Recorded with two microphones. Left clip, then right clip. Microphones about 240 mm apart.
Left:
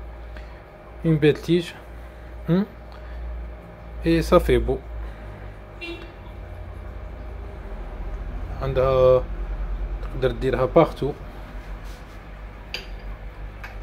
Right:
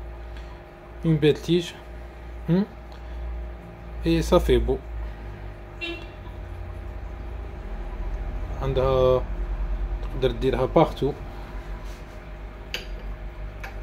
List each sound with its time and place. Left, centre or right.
1.0 s a man's voice: centre
4.0 s a man's voice: centre
8.5 s a man's voice: centre
10.2 s a man's voice: centre